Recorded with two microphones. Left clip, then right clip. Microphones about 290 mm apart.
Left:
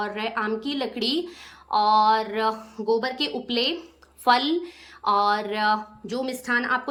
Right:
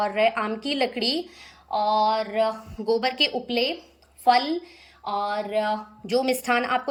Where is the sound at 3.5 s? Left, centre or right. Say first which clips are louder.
Even; left.